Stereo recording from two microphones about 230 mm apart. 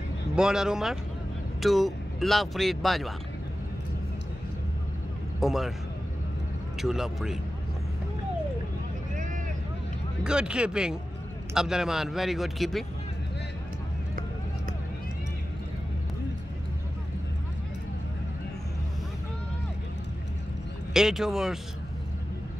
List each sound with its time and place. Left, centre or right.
0.4 s speech: centre
5.4 s speech: centre
6.8 s speech: centre
9.1 s vehicle: right
10.2 s speech: centre
20.9 s speech: centre